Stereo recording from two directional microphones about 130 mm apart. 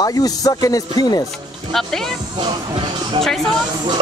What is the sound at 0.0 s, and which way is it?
Speech, 30° left (ahead or behind).